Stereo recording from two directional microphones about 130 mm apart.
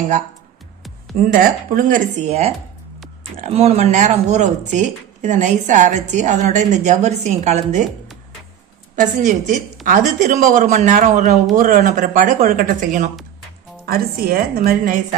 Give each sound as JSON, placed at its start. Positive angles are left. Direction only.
{"t": 1.1, "sound": "a woman's voice", "side_deg": -90}
{"t": 3.4, "sound": "speech", "side_deg": -55}
{"t": 9.0, "sound": "speech", "side_deg": -75}
{"t": 14.3, "sound": "a woman's voice", "side_deg": -90}